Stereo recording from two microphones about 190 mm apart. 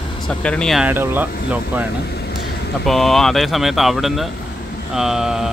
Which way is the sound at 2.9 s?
Centre (ahead or behind).